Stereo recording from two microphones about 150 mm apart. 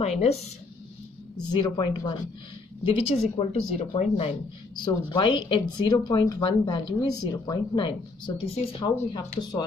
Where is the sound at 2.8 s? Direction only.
40° left (ahead or behind).